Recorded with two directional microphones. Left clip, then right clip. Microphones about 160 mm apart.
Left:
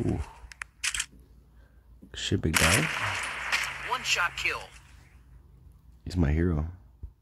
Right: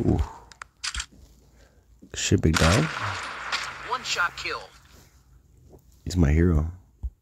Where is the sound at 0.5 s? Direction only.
Centre (ahead or behind).